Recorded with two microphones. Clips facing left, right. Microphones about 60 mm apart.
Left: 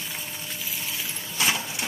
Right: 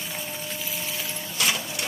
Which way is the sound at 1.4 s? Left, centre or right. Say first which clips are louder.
Left 1 dB; left.